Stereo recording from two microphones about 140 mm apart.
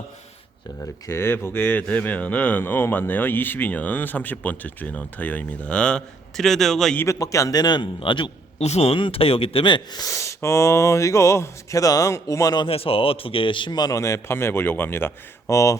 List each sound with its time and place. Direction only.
1.0 s speech: 15° left (ahead or behind)
7.0 s speech: 20° left (ahead or behind); by 8.3 s 35° left (ahead or behind)
8.5 s speech: 50° left (ahead or behind); by 12.6 s 25° left (ahead or behind)
12.6 s speech: 40° left (ahead or behind); by 15.8 s 20° left (ahead or behind)